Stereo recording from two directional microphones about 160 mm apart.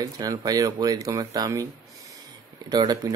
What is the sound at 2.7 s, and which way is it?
Speech, 25° right (ahead or behind).